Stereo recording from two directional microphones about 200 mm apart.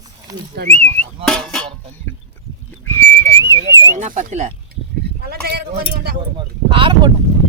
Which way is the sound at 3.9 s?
35° right (ahead or behind).